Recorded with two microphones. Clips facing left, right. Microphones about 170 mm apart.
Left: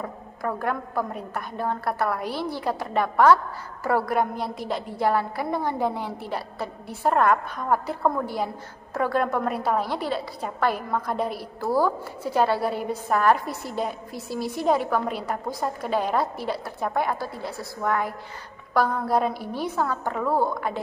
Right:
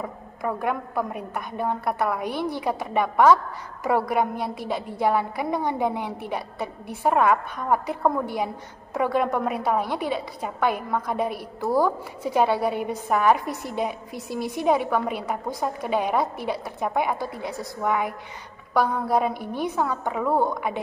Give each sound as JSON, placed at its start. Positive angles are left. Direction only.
{"t": 0.0, "sound": "a woman's voice", "side_deg": -10}
{"t": 1.9, "sound": "a woman's voice", "side_deg": 0}
{"t": 2.3, "sound": "a woman's voice", "side_deg": -15}